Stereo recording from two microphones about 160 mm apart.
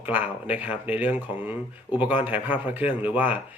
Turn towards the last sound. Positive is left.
turn(degrees=-10)  # may be behind; listen again after turning